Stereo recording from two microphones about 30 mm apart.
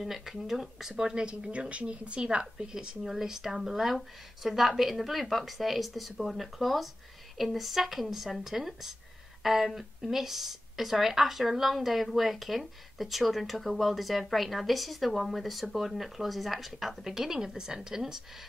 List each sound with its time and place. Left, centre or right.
0.0 s speech: centre
1.1 s a woman's voice: right
1.7 s a woman's voice: right
2.2 s a woman's voice: right
3.0 s speech: centre